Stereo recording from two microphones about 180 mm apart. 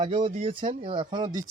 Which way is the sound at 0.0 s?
25° right (ahead or behind).